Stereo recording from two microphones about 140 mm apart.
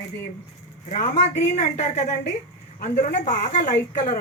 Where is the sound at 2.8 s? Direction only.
65° left (ahead or behind).